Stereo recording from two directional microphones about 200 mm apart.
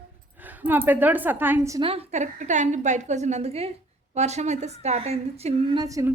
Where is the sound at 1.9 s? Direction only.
30° right (ahead or behind).